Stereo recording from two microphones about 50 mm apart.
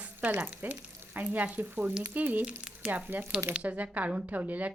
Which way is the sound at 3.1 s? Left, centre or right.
Right.